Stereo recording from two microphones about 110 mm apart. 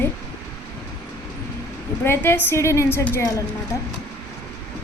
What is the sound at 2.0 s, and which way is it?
A woman's voice, 20° left (ahead or behind).